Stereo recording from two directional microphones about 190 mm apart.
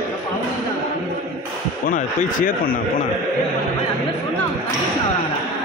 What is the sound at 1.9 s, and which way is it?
Speech, 45° left (ahead or behind).